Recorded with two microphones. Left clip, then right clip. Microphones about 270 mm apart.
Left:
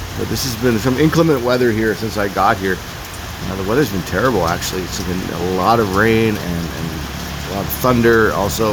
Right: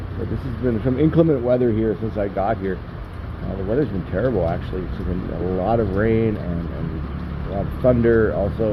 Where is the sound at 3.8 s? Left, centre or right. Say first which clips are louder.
Left 6 dB; left.